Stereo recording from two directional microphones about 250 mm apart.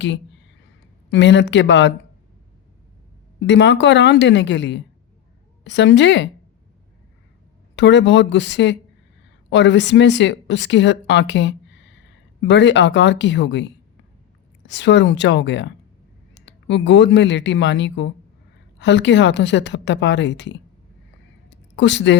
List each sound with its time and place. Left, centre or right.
1.1 s a woman's voice: left
3.4 s a woman's voice: left
7.8 s a woman's voice: left
21.8 s a woman's voice: left